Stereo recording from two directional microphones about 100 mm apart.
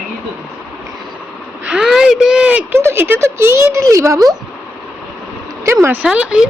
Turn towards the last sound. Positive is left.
turn(degrees=-10)  # may be behind; listen again after turning